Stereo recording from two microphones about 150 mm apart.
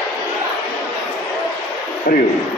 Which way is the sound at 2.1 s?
70° left (ahead or behind).